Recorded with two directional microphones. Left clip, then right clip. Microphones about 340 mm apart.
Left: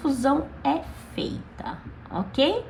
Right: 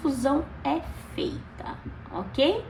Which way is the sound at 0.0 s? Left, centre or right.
Left.